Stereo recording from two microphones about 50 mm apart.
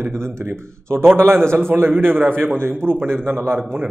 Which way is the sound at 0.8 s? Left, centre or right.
Right.